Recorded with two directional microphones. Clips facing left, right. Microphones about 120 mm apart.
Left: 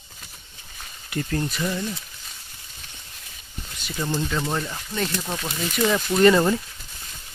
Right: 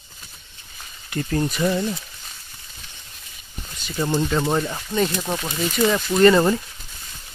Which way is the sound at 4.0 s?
30° right (ahead or behind).